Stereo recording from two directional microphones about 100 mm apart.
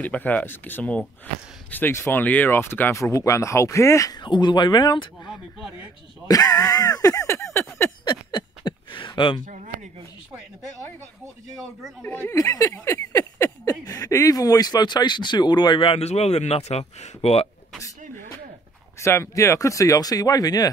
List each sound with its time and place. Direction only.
0.0 s speech: 15° left (ahead or behind); by 4.2 s 30° left (ahead or behind)
4.2 s speech: 50° left (ahead or behind)
5.6 s speech: 10° right (ahead or behind)
6.2 s a sound: 40° left (ahead or behind)
8.0 s a sound: 50° left (ahead or behind)
12.0 s speech: 20° left (ahead or behind)
12.4 s speech: 35° left (ahead or behind); by 17.5 s 90° left
18.9 s speech: 30° left (ahead or behind)